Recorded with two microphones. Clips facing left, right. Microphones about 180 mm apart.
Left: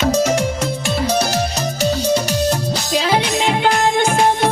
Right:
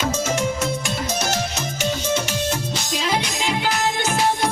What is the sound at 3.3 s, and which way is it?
Music, 60° left (ahead or behind).